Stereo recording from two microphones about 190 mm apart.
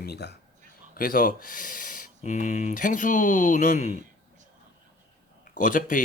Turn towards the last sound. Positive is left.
turn(degrees=45)  # may be behind; listen again after turning